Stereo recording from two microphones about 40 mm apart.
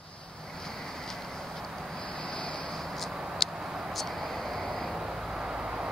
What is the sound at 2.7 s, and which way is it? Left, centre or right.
Vehicle, centre.